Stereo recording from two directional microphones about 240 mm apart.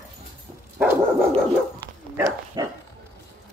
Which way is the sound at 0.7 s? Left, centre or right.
Centre.